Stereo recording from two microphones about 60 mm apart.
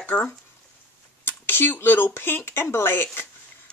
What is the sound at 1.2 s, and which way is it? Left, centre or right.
Speech, left.